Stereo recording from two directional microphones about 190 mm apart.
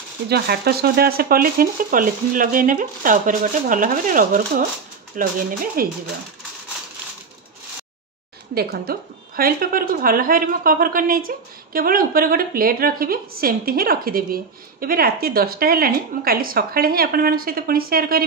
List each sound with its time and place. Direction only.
0.3 s a woman's voice: 55° right (ahead or behind)
8.5 s a woman's voice: 55° right (ahead or behind)